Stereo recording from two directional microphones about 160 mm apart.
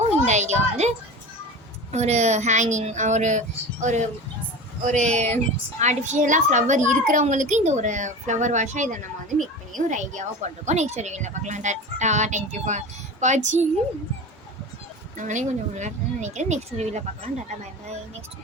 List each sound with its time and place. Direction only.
0.3 s a sound: 45° right (ahead or behind)
1.9 s a woman's voice: 45° right (ahead or behind)
15.2 s a woman's voice: 50° right (ahead or behind)